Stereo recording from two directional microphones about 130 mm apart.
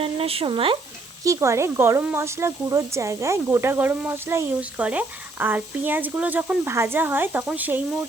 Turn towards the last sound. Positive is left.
turn(degrees=-15)  # may be behind; listen again after turning